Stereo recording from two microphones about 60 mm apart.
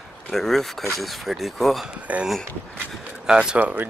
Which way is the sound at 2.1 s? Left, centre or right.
Right.